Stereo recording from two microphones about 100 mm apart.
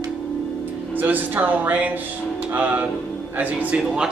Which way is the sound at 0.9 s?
15° right (ahead or behind).